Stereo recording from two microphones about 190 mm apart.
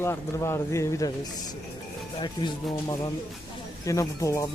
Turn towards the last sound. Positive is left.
turn(degrees=15)  # may be behind; listen again after turning